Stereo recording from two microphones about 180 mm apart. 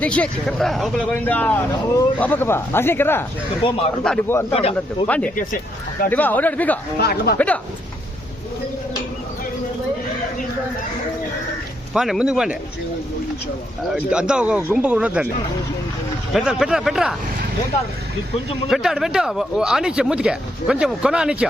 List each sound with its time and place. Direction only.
0.0 s speech: 5° left (ahead or behind)
3.6 s speech: 30° left (ahead or behind)
4.0 s speech: 5° left (ahead or behind)
7.0 s speech: 60° left (ahead or behind)
7.3 s speech: 10° left (ahead or behind)
11.9 s speech: centre (ahead or behind)
13.9 s speech: 5° right (ahead or behind)
16.3 s speech: centre (ahead or behind)
18.7 s speech: centre (ahead or behind)